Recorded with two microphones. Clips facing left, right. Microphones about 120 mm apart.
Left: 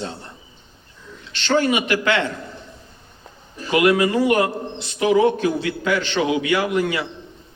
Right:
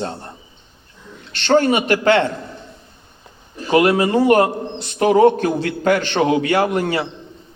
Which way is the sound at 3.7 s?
35° right (ahead or behind).